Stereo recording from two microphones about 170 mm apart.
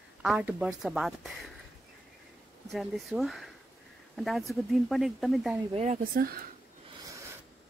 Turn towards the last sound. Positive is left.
turn(degrees=-20)  # may be behind; listen again after turning